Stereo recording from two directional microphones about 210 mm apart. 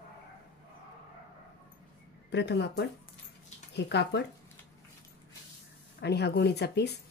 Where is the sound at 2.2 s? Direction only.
55° left (ahead or behind).